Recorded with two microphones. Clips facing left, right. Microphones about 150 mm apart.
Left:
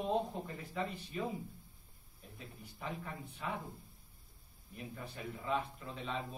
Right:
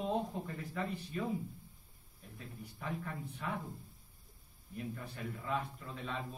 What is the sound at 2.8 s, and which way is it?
Speech, 10° left (ahead or behind).